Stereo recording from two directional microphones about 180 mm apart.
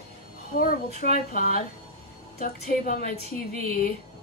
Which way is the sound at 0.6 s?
50° left (ahead or behind).